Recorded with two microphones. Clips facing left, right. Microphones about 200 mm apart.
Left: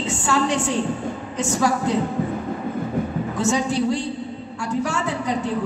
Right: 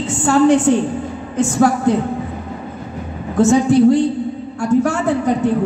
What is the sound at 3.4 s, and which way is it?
A woman's voice, 55° right (ahead or behind).